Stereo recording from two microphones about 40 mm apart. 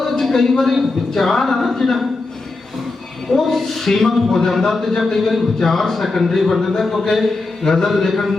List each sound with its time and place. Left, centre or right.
0.0 s a sound: centre
0.6 s speech: centre
3.3 s speech: centre